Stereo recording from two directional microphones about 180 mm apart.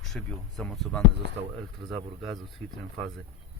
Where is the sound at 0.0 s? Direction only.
5° left (ahead or behind).